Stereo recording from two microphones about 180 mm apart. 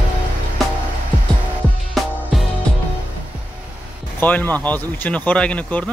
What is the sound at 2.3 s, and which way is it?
Music, centre (ahead or behind).